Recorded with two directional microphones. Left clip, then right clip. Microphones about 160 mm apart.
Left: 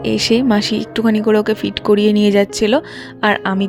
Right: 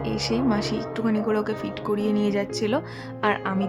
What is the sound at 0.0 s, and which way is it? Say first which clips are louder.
A woman's voice: left 10 dB; 50° left (ahead or behind).